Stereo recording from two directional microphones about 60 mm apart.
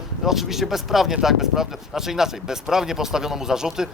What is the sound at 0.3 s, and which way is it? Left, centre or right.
Speech, centre.